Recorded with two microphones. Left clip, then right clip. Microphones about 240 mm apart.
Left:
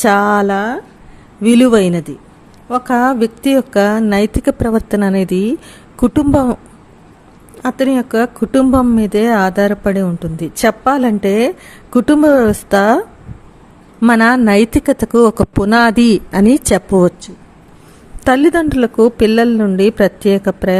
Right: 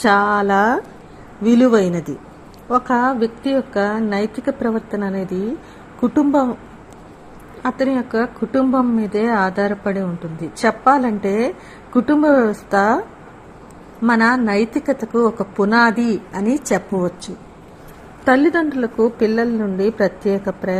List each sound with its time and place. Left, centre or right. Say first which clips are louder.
0.0 s speech: left 4 dB; left
0.5 s speech: right 2 dB; centre
1.4 s speech: left 4 dB; left
2.6 s speech: left 3 dB; left
7.6 s speech: left 4 dB; left
14.0 s speech: left 5 dB; left
18.3 s speech: left 4 dB; left